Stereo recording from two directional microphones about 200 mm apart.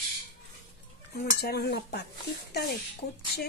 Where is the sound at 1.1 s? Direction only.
50° left (ahead or behind).